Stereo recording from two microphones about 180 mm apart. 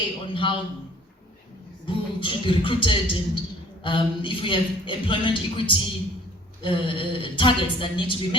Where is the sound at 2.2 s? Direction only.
30° left (ahead or behind).